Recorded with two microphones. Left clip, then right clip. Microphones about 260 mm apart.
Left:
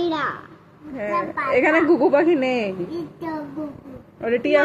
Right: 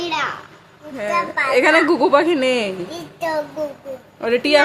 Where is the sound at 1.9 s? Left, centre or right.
Right.